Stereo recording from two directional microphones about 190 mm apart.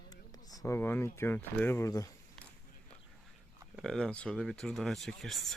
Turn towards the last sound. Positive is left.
turn(degrees=0)  # may be behind; listen again after turning